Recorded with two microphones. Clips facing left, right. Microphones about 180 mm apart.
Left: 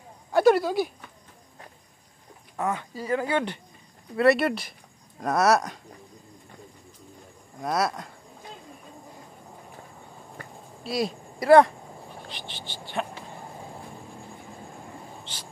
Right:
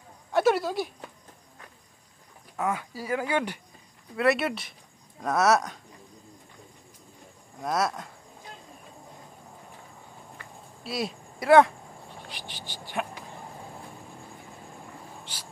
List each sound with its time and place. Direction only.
0.3 s speech: centre (ahead or behind)
2.6 s speech: 10° right (ahead or behind)
4.2 s speech: centre (ahead or behind)
7.6 s speech: centre (ahead or behind)
10.8 s speech: centre (ahead or behind)
15.3 s a sound: 10° right (ahead or behind)